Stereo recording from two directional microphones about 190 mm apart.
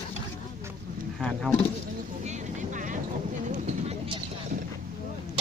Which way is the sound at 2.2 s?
40° right (ahead or behind).